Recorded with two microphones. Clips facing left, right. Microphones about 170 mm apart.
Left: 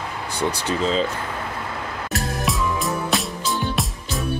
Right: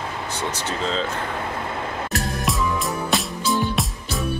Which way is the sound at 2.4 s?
Centre (ahead or behind).